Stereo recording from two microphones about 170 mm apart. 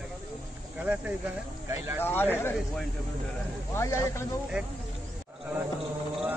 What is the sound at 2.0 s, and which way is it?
Speech, 10° left (ahead or behind).